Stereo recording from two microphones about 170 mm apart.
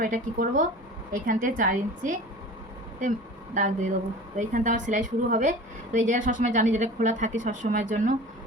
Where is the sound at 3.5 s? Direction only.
45° right (ahead or behind).